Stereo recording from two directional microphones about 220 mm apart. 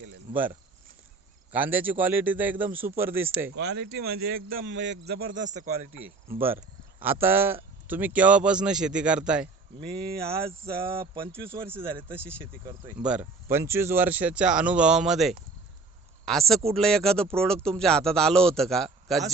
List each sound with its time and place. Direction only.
1.5 s speech: 10° right (ahead or behind)
3.5 s a man's voice: 50° right (ahead or behind)
4.4 s a man's voice: 60° right (ahead or behind); by 5.9 s 35° right (ahead or behind)
7.0 s speech: 10° right (ahead or behind)
10.9 s speech: 25° right (ahead or behind)
11.6 s speech: 10° right (ahead or behind)